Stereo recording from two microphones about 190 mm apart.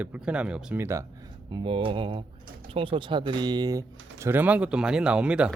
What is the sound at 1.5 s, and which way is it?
Speech, 25° right (ahead or behind).